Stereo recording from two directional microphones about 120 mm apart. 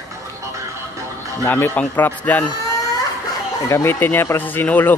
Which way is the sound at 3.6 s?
20° left (ahead or behind).